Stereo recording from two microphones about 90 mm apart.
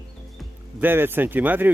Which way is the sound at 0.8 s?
25° right (ahead or behind).